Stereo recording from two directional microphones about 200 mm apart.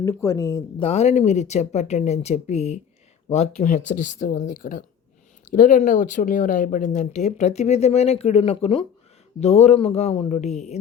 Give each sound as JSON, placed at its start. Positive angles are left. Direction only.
{"t": 0.0, "sound": "speech", "side_deg": 15}
{"t": 0.8, "sound": "speech", "side_deg": 30}